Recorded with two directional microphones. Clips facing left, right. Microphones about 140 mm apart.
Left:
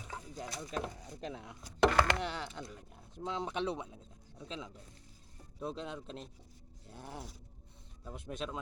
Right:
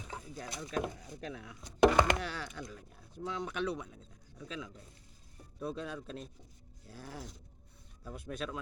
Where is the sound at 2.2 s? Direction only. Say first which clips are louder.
Left 1 dB; 20° left (ahead or behind).